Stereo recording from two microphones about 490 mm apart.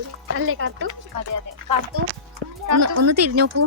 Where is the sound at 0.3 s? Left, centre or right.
Right.